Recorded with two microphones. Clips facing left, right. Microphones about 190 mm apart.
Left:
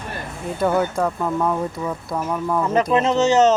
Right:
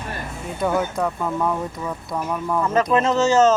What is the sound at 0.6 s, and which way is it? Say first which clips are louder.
Speech: left 2 dB; centre (ahead or behind).